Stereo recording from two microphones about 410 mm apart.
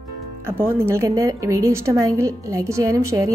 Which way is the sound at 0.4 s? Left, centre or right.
Centre.